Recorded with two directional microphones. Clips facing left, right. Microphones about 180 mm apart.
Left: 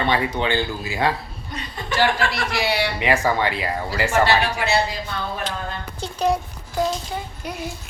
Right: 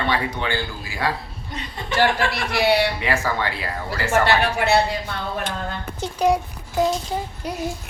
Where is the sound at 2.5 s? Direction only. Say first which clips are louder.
Right 9 dB; 60° right (ahead or behind).